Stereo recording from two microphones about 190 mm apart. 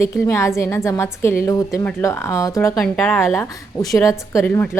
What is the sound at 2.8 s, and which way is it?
A woman's voice, 5° left (ahead or behind).